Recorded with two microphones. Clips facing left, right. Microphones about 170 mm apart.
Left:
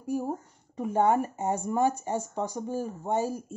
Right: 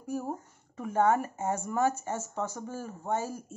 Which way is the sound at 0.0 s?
10° left (ahead or behind).